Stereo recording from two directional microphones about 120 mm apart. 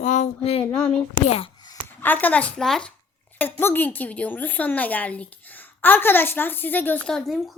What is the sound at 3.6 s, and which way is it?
A woman's voice, 15° left (ahead or behind).